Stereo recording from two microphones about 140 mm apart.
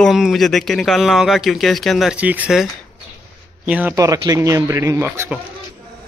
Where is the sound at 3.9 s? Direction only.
25° right (ahead or behind).